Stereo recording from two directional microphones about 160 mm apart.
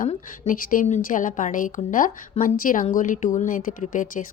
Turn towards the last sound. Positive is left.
turn(degrees=55)  # may be behind; listen again after turning